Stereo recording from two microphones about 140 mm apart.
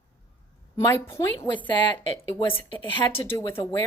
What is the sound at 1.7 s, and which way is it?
Speech, 35° left (ahead or behind).